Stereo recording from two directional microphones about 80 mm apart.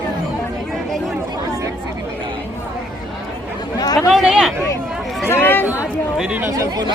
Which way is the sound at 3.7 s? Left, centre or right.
Left.